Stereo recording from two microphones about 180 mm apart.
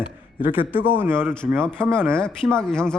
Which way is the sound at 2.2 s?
5° left (ahead or behind).